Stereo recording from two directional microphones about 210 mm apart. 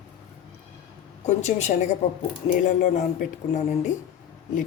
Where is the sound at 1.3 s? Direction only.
35° left (ahead or behind).